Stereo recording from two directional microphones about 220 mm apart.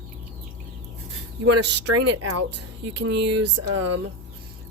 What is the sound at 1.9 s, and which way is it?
Speech, 90° right.